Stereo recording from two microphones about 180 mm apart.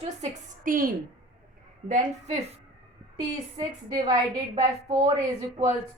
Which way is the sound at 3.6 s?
25° right (ahead or behind).